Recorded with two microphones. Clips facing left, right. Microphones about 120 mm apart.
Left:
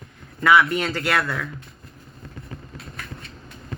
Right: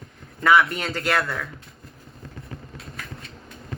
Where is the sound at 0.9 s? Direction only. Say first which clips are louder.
Left 1 dB; 25° right (ahead or behind).